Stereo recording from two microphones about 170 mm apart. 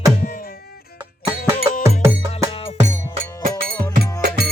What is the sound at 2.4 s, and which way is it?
Music, 45° right (ahead or behind).